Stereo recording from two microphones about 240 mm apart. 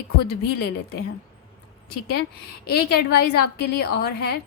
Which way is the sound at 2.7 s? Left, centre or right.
Left.